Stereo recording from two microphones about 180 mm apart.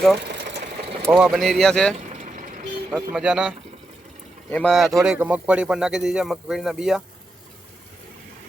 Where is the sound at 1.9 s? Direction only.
40° right (ahead or behind).